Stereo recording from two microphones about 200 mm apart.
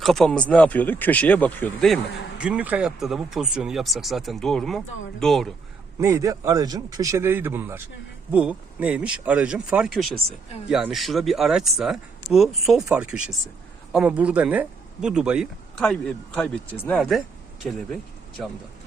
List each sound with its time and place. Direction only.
0.0 s speech: centre (ahead or behind)
2.4 s speech: 5° right (ahead or behind)
6.0 s speech: 15° right (ahead or behind)